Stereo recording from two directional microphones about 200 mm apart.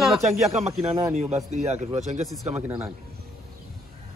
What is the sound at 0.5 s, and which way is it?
Speech, 35° right (ahead or behind).